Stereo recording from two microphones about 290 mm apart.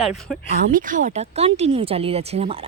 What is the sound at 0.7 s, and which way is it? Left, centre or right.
Speech, right.